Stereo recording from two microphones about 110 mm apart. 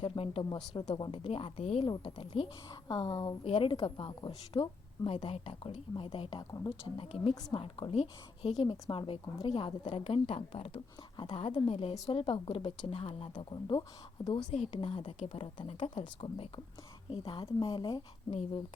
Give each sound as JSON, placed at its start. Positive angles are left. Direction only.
{"t": 0.0, "sound": "a woman's voice", "side_deg": 55}
{"t": 2.6, "sound": "a woman's voice", "side_deg": 35}
{"t": 3.4, "sound": "a woman's voice", "side_deg": 55}
{"t": 13.3, "sound": "a woman's voice", "side_deg": 45}
{"t": 14.3, "sound": "a woman's voice", "side_deg": 70}
{"t": 14.7, "sound": "a woman's voice", "side_deg": 55}
{"t": 15.6, "sound": "a woman's voice", "side_deg": 55}
{"t": 18.3, "sound": "a woman's voice", "side_deg": 65}